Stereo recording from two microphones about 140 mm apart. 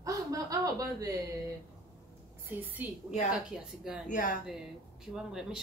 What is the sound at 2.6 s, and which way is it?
A woman's voice, 15° right (ahead or behind).